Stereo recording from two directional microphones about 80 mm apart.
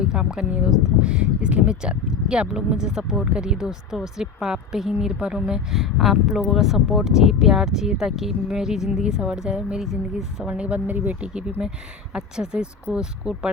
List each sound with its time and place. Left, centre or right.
0.0 s speech: centre
10.5 s speech: centre